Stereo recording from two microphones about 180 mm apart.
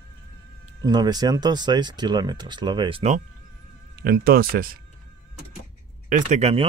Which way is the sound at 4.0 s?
55° right (ahead or behind).